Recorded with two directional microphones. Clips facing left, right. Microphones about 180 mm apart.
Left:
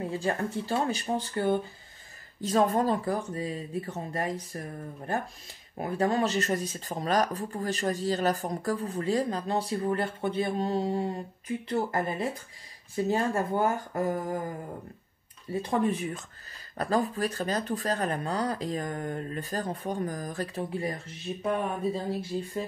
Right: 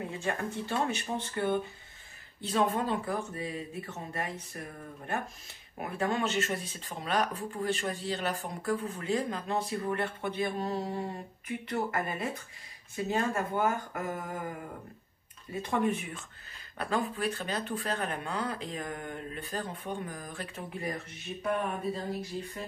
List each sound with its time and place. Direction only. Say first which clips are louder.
0.2 s speech: left 4 dB; 35° left (ahead or behind)
15.7 s speech: left 2 dB; 35° left (ahead or behind)